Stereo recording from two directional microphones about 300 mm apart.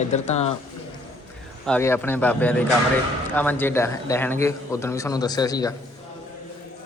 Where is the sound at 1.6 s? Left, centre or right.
Centre.